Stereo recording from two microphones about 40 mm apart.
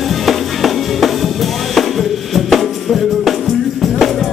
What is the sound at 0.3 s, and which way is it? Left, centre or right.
Music, centre.